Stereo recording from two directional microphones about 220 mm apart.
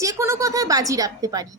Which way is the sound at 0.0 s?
15° right (ahead or behind).